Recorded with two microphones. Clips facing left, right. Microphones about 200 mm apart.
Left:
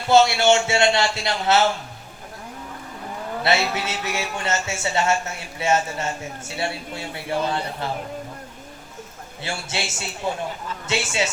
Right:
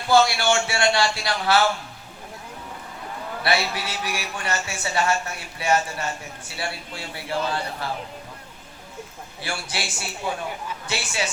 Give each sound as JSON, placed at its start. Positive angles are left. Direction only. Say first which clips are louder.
{"t": 0.1, "sound": "a woman's voice", "louder": "left 3 dB", "side_deg": 25}
{"t": 3.4, "sound": "a woman's voice", "louder": "left 2 dB", "side_deg": 25}
{"t": 9.4, "sound": "a woman's voice", "louder": "left 2 dB", "side_deg": 25}